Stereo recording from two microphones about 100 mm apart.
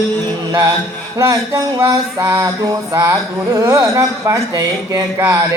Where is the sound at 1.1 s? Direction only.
30° right (ahead or behind).